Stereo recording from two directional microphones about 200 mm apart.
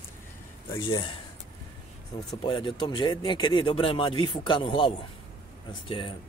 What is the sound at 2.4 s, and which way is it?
Speech, 25° left (ahead or behind).